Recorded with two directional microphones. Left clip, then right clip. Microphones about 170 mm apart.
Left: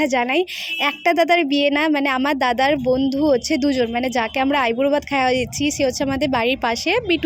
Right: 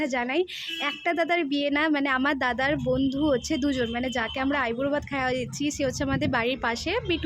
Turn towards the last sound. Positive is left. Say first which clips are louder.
# left 8 dB
turn(degrees=35)  # may be behind; listen again after turning